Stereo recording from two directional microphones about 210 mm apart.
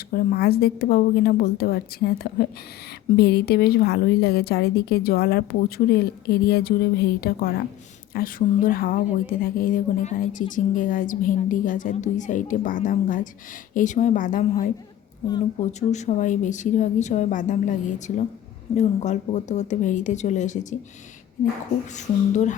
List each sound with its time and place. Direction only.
0.1 s a woman's voice: 45° left (ahead or behind)
15.9 s a woman's voice: 35° left (ahead or behind)
21.9 s a woman's voice: 35° left (ahead or behind)